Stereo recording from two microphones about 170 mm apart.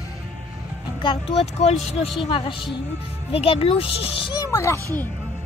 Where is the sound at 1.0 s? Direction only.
40° left (ahead or behind); by 4.7 s 20° left (ahead or behind).